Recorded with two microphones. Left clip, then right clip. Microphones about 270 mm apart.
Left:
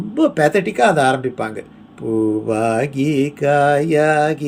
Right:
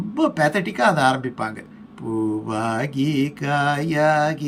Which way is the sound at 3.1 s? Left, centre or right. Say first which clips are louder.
Left 9 dB; centre.